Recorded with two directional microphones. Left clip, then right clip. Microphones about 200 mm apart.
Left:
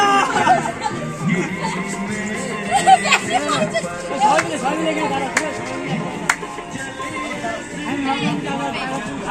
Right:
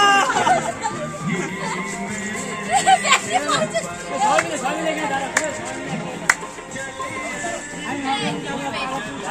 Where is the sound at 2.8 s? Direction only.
Centre (ahead or behind).